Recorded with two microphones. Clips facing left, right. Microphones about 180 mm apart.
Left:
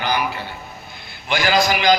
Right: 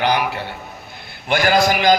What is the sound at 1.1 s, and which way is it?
Speech, 55° right (ahead or behind).